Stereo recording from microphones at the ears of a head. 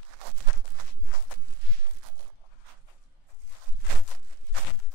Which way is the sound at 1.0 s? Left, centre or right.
Left.